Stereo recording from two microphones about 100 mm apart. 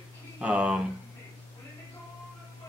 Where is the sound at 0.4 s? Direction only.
10° right (ahead or behind).